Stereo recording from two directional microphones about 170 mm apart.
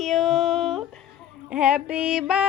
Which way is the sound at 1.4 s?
5° right (ahead or behind).